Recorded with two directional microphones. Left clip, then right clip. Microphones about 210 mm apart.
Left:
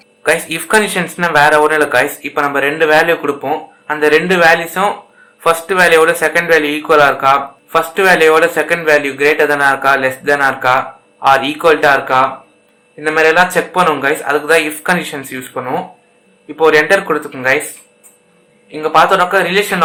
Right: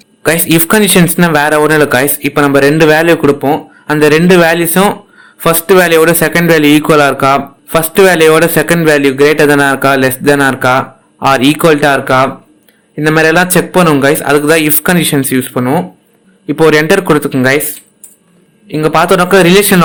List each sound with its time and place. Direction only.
0.2 s a man's voice: 50° right (ahead or behind)
18.7 s a man's voice: 45° right (ahead or behind)